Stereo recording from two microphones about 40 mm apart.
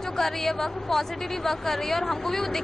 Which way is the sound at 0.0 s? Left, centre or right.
Centre.